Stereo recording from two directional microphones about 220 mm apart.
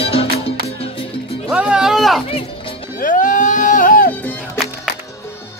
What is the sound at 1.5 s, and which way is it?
Music, 5° right (ahead or behind).